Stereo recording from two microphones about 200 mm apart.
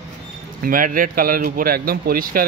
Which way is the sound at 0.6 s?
45° right (ahead or behind).